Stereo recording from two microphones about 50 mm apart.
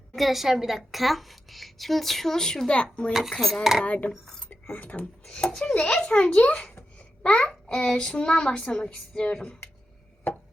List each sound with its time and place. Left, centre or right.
0.2 s a woman's voice: centre; by 3.1 s left
3.1 s a woman's voice: centre
3.8 s a child's voice: left
4.1 s a child's voice: centre
4.6 s speech: left
5.2 s a child's voice: centre